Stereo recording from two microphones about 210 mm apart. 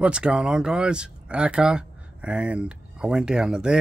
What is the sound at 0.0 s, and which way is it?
Speech, 5° right (ahead or behind).